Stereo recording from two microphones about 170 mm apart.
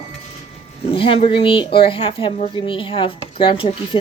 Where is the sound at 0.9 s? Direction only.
30° left (ahead or behind).